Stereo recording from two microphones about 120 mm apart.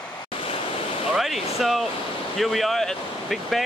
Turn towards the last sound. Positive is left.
turn(degrees=0)  # may be behind; listen again after turning